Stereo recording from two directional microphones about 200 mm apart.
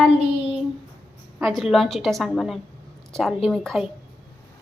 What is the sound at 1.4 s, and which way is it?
A woman's voice, centre (ahead or behind).